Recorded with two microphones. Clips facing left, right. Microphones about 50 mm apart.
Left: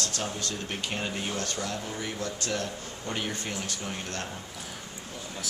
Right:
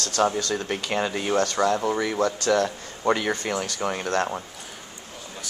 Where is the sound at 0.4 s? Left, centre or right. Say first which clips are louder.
Right 7 dB; right.